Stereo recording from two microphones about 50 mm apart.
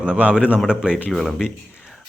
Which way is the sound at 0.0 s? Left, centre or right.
Right.